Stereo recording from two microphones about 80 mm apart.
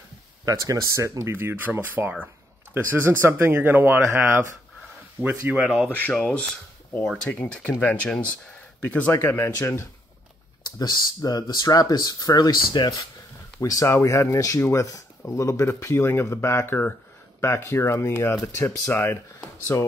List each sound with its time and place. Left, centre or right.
0.5 s speech: right
5.9 s speech: left
10.6 s speech: left
13.6 s speech: left